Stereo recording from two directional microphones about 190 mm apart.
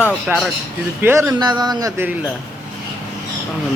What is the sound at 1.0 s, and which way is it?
A man's voice, 10° right (ahead or behind).